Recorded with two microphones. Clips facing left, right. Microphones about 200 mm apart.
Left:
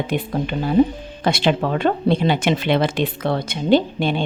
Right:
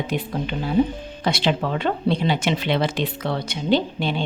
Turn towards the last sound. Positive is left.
turn(degrees=50)  # may be behind; listen again after turning